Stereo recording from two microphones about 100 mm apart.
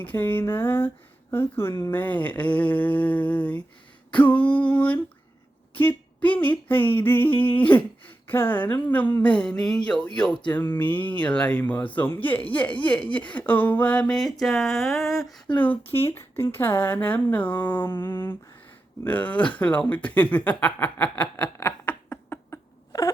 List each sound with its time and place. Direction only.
0.0 s speech: 20° left (ahead or behind)
10.5 s speech: 20° left (ahead or behind); by 15.3 s centre (ahead or behind)
15.5 s speech: 15° left (ahead or behind)
22.9 s wail: 35° left (ahead or behind)